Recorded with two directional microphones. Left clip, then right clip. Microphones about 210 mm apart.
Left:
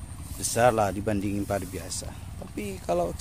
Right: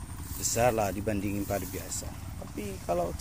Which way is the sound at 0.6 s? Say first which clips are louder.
Left 5 dB; 20° left (ahead or behind).